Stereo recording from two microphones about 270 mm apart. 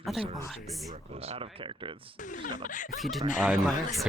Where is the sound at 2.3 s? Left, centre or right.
Left.